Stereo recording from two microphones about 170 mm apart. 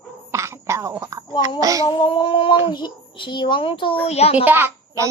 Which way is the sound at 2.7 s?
25° left (ahead or behind).